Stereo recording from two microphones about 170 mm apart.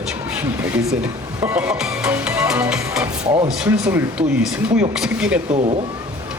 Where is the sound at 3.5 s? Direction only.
5° right (ahead or behind).